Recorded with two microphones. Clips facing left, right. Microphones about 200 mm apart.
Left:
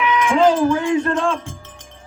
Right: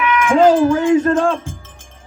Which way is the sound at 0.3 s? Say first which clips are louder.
Right 4 dB; 40° right (ahead or behind).